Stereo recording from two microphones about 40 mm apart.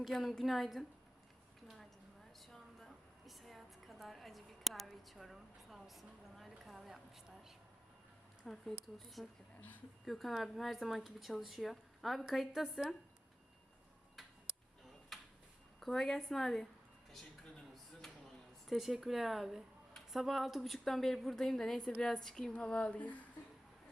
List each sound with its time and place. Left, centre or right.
0.1 s a woman's voice: centre
1.6 s a sound: centre
3.2 s a sound: centre
8.4 s a woman's voice: centre
9.6 s speech: left
10.1 s a woman's voice: centre
15.1 s a sound: centre
15.8 s a woman's voice: centre
18.7 s a woman's voice: centre
22.5 s speech: left
23.0 s speech: left